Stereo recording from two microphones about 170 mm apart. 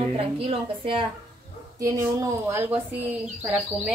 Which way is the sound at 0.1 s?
35° right (ahead or behind).